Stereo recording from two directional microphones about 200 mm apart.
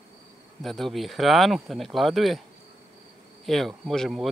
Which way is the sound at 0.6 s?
Centre (ahead or behind).